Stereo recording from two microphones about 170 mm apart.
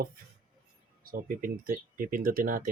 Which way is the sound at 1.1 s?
55° right (ahead or behind).